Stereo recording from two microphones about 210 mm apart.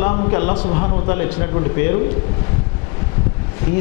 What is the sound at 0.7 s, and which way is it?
Speech, 35° left (ahead or behind).